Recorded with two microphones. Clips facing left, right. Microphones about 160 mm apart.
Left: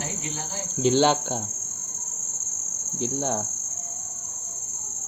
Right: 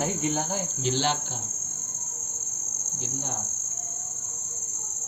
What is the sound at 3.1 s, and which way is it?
Cricket, 75° left (ahead or behind).